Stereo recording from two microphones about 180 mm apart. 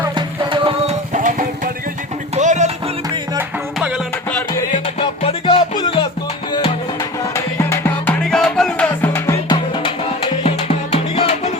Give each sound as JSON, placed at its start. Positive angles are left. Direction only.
{"t": 0.1, "sound": "music", "side_deg": -25}
{"t": 1.1, "sound": "music", "side_deg": -45}
{"t": 3.8, "sound": "music", "side_deg": -5}
{"t": 4.3, "sound": "music", "side_deg": 10}
{"t": 4.9, "sound": "music", "side_deg": 30}
{"t": 7.3, "sound": "music", "side_deg": 15}